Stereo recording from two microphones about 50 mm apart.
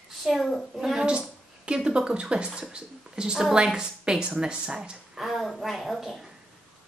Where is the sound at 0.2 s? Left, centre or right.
Centre.